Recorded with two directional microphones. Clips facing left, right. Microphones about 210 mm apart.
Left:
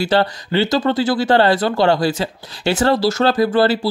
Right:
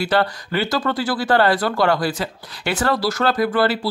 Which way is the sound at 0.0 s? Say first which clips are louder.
Left 3 dB; 25° left (ahead or behind).